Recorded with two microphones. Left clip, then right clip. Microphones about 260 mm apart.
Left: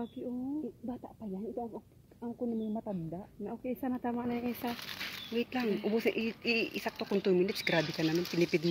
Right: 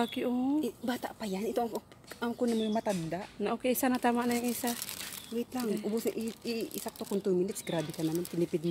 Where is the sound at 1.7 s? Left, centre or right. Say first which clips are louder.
Right 8 dB; right.